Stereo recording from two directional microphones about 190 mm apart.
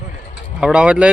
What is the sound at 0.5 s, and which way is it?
Speech, 5° right (ahead or behind).